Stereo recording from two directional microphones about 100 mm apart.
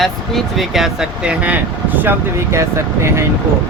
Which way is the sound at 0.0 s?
Centre (ahead or behind).